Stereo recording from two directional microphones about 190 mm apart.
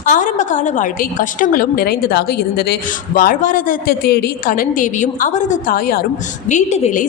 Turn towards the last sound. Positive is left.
turn(degrees=40)  # may be behind; listen again after turning